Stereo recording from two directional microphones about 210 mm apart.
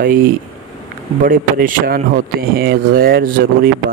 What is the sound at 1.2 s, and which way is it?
A man's voice, 40° right (ahead or behind).